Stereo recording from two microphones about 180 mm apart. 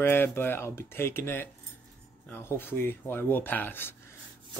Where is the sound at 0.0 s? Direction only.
10° left (ahead or behind).